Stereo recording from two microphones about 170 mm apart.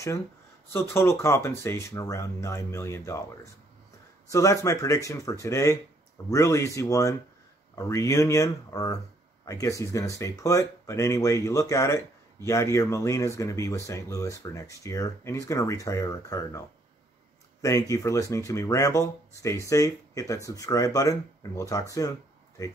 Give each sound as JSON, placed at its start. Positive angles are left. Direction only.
{"t": 0.7, "sound": "speech", "side_deg": 15}
{"t": 4.3, "sound": "speech", "side_deg": 20}